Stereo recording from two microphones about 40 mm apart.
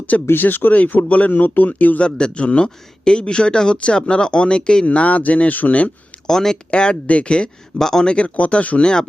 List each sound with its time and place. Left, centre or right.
0.3 s speech: left
0.7 s speech: left
2.0 s speech: left
4.9 s speech: left
6.2 s speech: centre
6.7 s speech: left
7.8 s speech: centre
8.0 s speech: left
8.8 s speech: left